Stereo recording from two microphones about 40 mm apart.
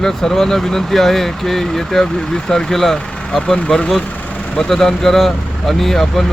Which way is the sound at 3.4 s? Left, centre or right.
Centre.